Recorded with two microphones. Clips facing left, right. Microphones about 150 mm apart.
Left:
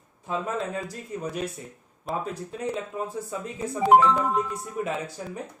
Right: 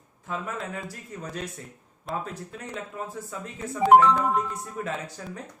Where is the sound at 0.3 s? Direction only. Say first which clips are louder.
Left 4 dB; 25° left (ahead or behind).